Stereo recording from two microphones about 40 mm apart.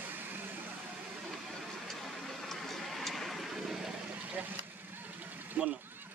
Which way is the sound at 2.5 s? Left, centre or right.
Centre.